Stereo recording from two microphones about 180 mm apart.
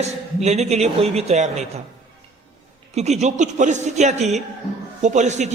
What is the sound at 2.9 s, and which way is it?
A man's voice, 40° right (ahead or behind).